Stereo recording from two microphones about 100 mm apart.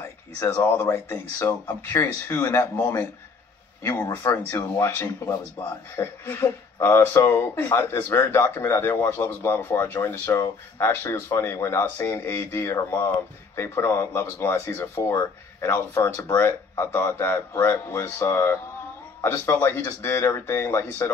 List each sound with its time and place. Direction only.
0.4 s speech: 25° left (ahead or behind)
4.0 s speech: 35° left (ahead or behind)